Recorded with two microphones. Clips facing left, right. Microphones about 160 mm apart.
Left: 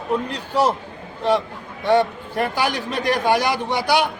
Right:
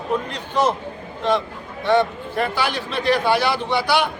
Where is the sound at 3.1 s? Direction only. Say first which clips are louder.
Right 1 dB; 45° left (ahead or behind).